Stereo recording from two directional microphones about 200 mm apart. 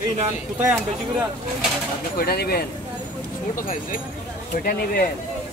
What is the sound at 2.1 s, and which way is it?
Speech, 50° left (ahead or behind).